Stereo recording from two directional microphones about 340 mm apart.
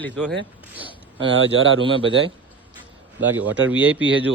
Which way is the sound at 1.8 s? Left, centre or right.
Centre.